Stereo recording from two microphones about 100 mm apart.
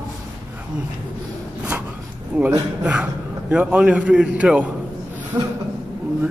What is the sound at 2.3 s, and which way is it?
A man's voice, 15° right (ahead or behind).